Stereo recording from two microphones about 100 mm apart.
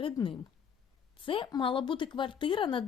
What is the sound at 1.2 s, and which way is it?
Speech, 60° left (ahead or behind).